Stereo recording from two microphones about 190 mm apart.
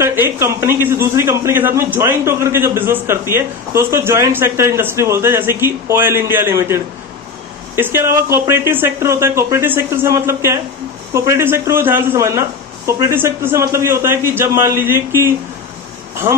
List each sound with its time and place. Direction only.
0.0 s a man's voice: 15° right (ahead or behind)
16.3 s speech: 25° right (ahead or behind)